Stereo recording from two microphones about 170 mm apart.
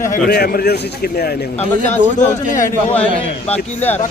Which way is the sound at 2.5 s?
50° left (ahead or behind).